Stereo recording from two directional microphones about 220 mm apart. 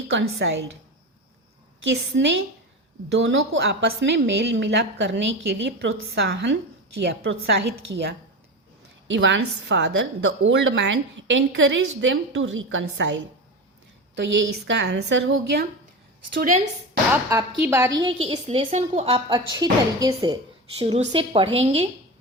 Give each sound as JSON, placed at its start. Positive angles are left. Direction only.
{"t": 0.1, "sound": "a woman's voice", "side_deg": -55}
{"t": 1.8, "sound": "a woman's voice", "side_deg": -55}
{"t": 16.4, "sound": "speech", "side_deg": -35}
{"t": 17.2, "sound": "a woman's voice", "side_deg": -15}